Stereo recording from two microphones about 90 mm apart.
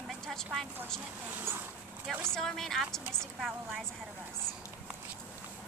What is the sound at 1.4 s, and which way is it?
Speech, 25° right (ahead or behind).